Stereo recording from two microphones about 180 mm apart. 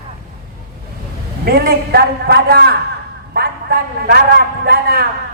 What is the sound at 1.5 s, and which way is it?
A man's voice, 60° right (ahead or behind).